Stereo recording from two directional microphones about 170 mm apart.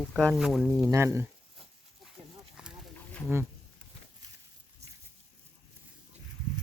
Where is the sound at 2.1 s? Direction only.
5° right (ahead or behind).